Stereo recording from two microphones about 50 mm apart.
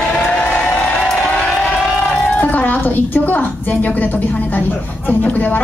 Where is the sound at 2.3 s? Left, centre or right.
Left.